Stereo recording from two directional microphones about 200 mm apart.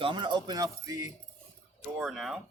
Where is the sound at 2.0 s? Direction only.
Centre (ahead or behind).